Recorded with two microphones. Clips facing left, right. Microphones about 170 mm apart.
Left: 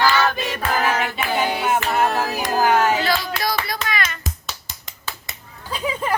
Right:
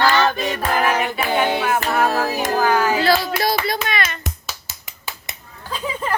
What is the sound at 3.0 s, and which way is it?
Hands, 30° right (ahead or behind).